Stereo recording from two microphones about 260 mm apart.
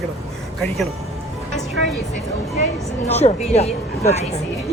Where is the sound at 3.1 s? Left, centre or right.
Left.